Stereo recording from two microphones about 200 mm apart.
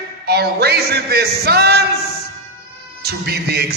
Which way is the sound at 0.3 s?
55° right (ahead or behind).